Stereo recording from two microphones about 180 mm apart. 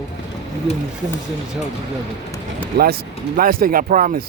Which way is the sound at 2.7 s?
60° right (ahead or behind).